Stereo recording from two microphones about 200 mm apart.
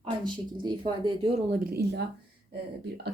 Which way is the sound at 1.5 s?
50° right (ahead or behind).